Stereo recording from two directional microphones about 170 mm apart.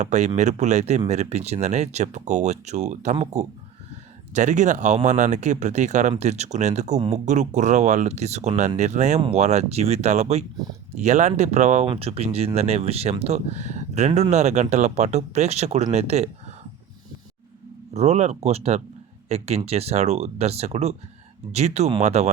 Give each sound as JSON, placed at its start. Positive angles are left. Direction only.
{"t": 0.0, "sound": "speech", "side_deg": -40}
{"t": 17.9, "sound": "speech", "side_deg": -40}